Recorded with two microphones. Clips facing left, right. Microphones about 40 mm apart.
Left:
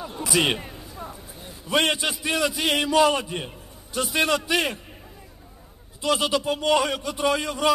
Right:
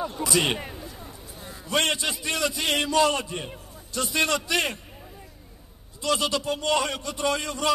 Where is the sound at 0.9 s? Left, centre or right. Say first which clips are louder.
Left 4 dB; left.